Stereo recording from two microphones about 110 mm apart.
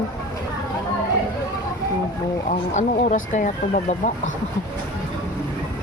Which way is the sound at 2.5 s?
90° left.